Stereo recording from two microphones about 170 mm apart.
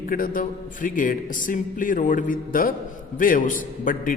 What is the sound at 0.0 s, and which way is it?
A man's voice, 55° left (ahead or behind).